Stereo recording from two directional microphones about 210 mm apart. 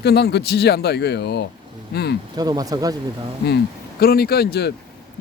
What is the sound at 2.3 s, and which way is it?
Speech, 20° right (ahead or behind).